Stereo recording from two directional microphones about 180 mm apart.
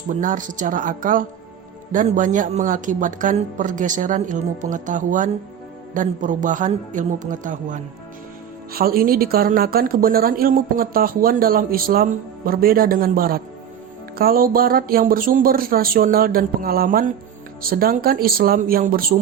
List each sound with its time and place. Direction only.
0.1 s a woman's voice: 45° right (ahead or behind)
8.7 s a woman's voice: 55° right (ahead or behind)